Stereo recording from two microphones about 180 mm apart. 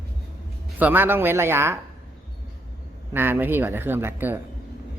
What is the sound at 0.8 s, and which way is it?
Speech, 10° right (ahead or behind).